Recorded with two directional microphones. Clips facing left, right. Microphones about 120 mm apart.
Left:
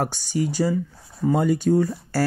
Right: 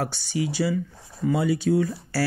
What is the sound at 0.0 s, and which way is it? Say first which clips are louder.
Speech: left 3 dB; 45° left (ahead or behind).